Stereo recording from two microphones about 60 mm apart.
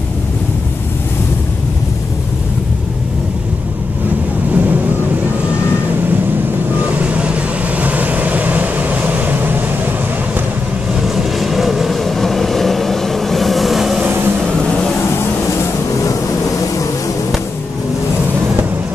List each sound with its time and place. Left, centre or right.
4.5 s vehicle: right
6.7 s vehicle: right
11.0 s vehicle: centre
14.0 s vehicle: right
16.0 s vehicle: left